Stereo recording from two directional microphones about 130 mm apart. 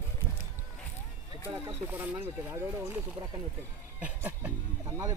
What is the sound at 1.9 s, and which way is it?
Speech, 15° right (ahead or behind).